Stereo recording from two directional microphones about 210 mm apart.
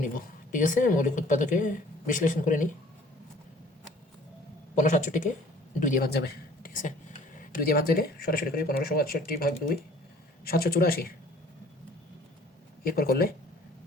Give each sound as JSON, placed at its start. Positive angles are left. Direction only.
{"t": 0.5, "sound": "a woman's voice", "side_deg": 40}
{"t": 4.8, "sound": "a woman's voice", "side_deg": 35}
{"t": 12.8, "sound": "speech", "side_deg": 45}